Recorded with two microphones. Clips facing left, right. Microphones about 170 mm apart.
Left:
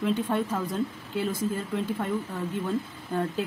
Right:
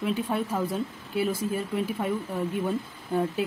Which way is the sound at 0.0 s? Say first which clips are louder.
Left 1 dB; 10° right (ahead or behind).